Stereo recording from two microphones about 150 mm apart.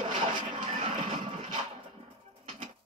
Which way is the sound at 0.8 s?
45° right (ahead or behind).